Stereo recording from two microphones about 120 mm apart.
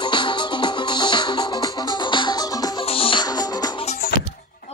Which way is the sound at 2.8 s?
50° left (ahead or behind).